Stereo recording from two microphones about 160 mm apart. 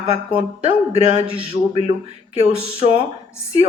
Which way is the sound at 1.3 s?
35° right (ahead or behind).